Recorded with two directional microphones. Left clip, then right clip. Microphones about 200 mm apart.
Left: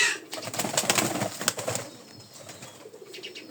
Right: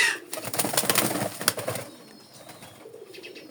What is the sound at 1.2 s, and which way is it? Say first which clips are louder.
Pigeon: right 2 dB; 10° right (ahead or behind).